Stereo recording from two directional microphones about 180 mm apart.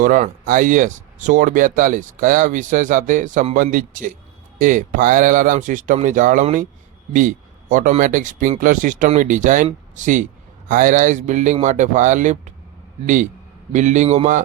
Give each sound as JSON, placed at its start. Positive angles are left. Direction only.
{"t": 0.0, "sound": "speech", "side_deg": -50}
{"t": 13.7, "sound": "a man's voice", "side_deg": -40}